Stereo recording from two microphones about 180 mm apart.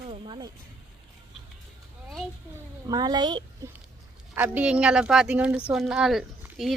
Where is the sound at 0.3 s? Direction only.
20° right (ahead or behind).